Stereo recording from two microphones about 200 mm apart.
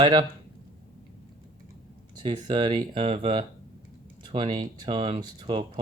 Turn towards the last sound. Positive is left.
turn(degrees=-25)  # may be behind; listen again after turning